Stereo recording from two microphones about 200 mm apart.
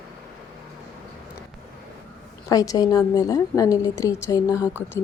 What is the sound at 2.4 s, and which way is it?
A woman's voice, 15° left (ahead or behind).